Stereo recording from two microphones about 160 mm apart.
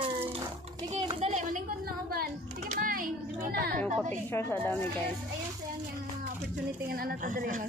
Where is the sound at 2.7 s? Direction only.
60° right (ahead or behind).